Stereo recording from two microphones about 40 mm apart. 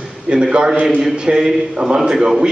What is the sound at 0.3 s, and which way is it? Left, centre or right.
A man's voice, right.